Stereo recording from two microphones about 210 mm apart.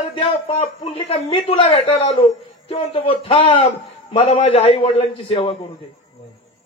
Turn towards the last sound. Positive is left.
turn(degrees=25)  # may be behind; listen again after turning